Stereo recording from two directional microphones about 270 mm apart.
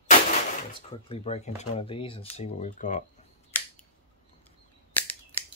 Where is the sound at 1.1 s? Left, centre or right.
Left.